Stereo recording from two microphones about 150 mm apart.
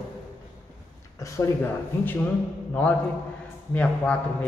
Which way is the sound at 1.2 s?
20° left (ahead or behind).